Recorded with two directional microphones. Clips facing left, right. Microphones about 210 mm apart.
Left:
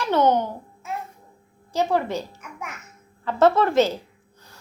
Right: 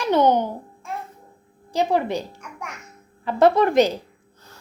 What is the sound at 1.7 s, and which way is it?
Speech, 15° right (ahead or behind).